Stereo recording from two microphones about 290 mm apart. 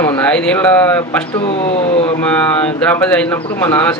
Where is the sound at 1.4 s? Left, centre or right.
Centre.